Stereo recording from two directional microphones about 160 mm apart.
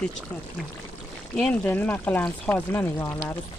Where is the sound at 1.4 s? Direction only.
10° left (ahead or behind).